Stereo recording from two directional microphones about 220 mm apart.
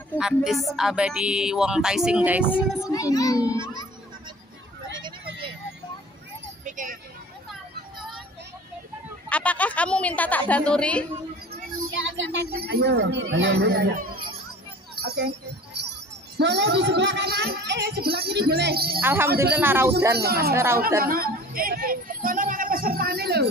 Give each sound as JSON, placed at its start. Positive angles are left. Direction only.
{"t": 0.2, "sound": "speech", "side_deg": 0}
{"t": 2.9, "sound": "a woman's voice", "side_deg": 15}
{"t": 6.6, "sound": "a sound", "side_deg": -35}
{"t": 9.3, "sound": "a woman's voice", "side_deg": 5}
{"t": 11.5, "sound": "a sound", "side_deg": -55}
{"t": 16.3, "sound": "speech", "side_deg": -50}
{"t": 18.9, "sound": "speech", "side_deg": -10}
{"t": 20.2, "sound": "speech", "side_deg": -45}
{"t": 20.5, "sound": "speech", "side_deg": -10}
{"t": 21.0, "sound": "a woman's voice", "side_deg": -40}